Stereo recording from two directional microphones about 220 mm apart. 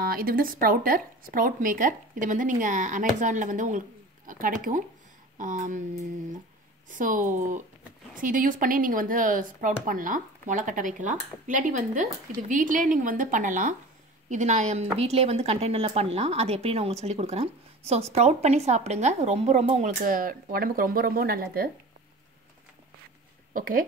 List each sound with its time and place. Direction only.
0.0 s speech: 40° right (ahead or behind)
6.9 s a woman's voice: 35° right (ahead or behind)
23.5 s speech: 40° right (ahead or behind)